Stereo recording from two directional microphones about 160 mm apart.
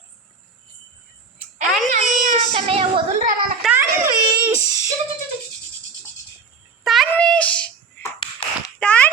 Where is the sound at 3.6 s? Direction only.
Centre (ahead or behind).